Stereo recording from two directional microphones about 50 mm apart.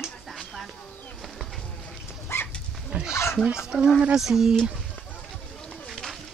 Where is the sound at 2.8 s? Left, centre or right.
Centre.